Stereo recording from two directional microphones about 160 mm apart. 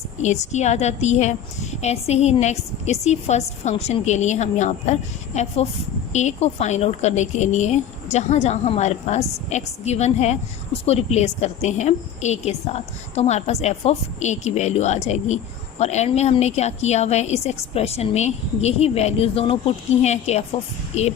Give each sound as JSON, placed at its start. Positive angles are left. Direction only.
{"t": 0.2, "sound": "a woman's voice", "side_deg": 45}